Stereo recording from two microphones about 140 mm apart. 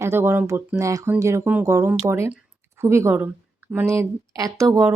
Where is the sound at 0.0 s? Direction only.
15° right (ahead or behind).